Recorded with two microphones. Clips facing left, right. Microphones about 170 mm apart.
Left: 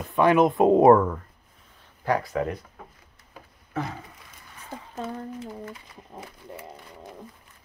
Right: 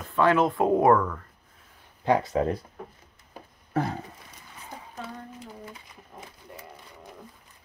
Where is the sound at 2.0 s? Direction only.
25° right (ahead or behind).